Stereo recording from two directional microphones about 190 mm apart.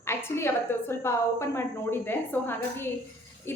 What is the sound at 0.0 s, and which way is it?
A woman's voice, 15° left (ahead or behind).